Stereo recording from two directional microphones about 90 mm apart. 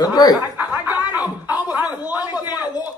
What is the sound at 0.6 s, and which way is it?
Speech, 20° right (ahead or behind).